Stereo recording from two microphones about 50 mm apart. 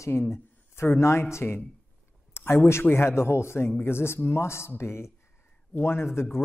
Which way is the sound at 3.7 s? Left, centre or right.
Left.